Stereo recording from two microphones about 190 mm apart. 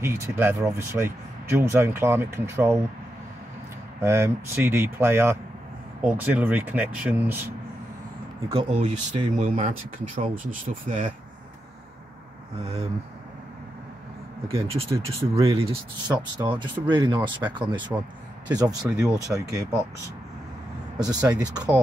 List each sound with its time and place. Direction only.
0.0 s speech: 15° right (ahead or behind)
4.0 s speech: 15° right (ahead or behind)
8.5 s speech: 30° right (ahead or behind)
12.6 s speech: 35° right (ahead or behind)
14.5 s speech: 30° right (ahead or behind)
21.0 s speech: 20° right (ahead or behind)